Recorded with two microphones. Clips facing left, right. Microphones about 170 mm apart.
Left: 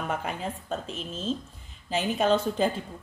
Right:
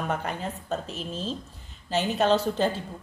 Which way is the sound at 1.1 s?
35° right (ahead or behind).